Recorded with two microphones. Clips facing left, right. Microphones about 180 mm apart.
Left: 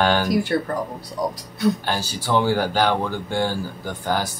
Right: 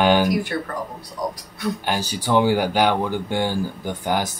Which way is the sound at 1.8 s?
15° right (ahead or behind).